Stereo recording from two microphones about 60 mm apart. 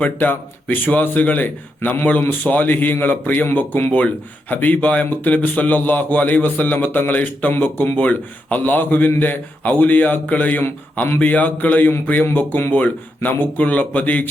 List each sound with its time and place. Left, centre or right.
0.0 s speech: left